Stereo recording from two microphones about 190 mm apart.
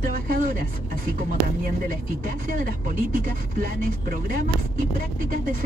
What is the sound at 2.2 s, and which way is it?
Speech, 45° right (ahead or behind).